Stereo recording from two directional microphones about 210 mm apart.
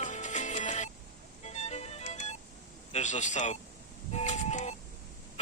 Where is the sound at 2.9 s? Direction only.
35° left (ahead or behind).